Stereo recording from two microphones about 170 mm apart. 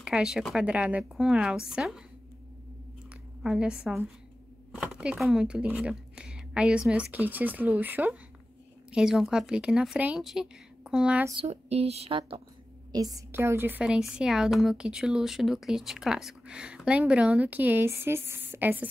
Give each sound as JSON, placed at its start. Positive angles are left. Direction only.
{"t": 0.0, "sound": "a woman's voice", "side_deg": -5}
{"t": 3.4, "sound": "a woman's voice", "side_deg": -5}
{"t": 11.3, "sound": "speech", "side_deg": -35}
{"t": 12.9, "sound": "a woman's voice", "side_deg": -20}